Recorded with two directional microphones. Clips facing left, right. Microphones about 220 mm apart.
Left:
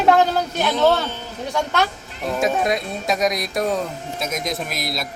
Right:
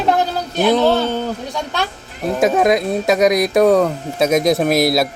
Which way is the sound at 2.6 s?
80° right.